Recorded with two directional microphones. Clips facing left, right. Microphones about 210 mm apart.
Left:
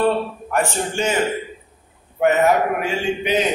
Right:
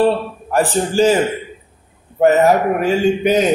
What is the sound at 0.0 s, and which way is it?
A man's voice, 35° right (ahead or behind).